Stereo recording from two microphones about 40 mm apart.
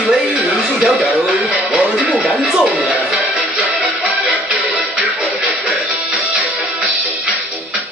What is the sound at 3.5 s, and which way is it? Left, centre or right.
Music, right.